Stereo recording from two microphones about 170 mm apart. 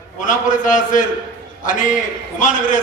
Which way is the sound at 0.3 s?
50° left (ahead or behind).